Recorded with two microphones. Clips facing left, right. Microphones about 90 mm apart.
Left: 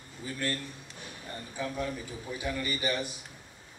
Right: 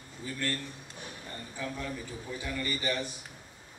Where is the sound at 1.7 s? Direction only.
15° left (ahead or behind).